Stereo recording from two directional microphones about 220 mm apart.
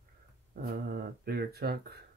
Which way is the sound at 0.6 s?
40° right (ahead or behind).